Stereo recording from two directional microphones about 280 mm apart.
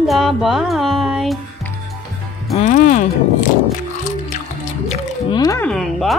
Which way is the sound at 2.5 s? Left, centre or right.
Left.